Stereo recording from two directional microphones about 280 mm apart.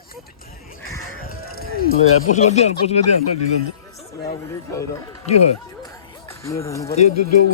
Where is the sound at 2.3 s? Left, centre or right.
Left.